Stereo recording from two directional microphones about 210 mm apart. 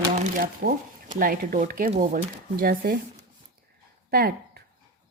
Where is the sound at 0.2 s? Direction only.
40° right (ahead or behind).